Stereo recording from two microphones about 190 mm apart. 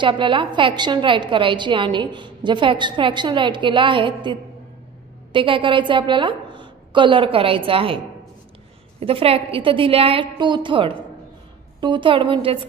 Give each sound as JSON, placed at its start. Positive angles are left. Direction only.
{"t": 0.0, "sound": "a woman's voice", "side_deg": -25}
{"t": 9.0, "sound": "a woman's voice", "side_deg": -30}